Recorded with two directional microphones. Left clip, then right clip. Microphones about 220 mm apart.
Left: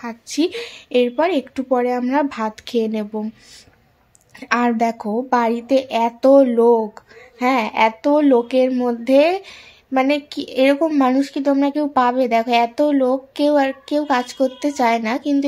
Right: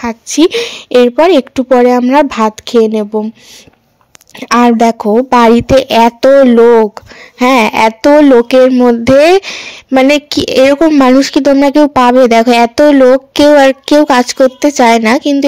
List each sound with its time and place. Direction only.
0.0 s a woman's voice: 35° right (ahead or behind)
4.4 s a woman's voice: 35° right (ahead or behind)